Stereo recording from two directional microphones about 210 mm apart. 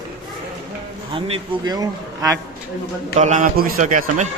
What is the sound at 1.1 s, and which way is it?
A man's voice, 20° right (ahead or behind).